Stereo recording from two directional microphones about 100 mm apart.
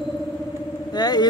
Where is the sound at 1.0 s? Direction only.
40° left (ahead or behind).